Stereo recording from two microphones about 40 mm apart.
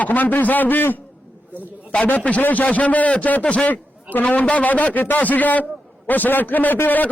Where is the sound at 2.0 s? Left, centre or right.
Left.